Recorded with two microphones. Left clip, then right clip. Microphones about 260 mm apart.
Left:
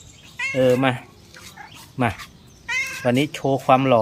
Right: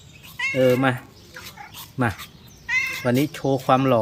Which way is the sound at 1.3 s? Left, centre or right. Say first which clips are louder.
Right 2 dB; centre.